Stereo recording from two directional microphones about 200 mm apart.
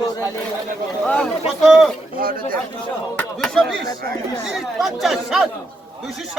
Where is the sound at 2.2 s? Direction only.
45° right (ahead or behind).